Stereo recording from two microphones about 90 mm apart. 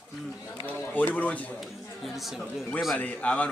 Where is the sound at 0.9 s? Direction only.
15° left (ahead or behind).